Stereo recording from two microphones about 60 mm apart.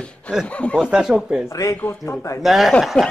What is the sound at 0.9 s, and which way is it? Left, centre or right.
Speech, centre.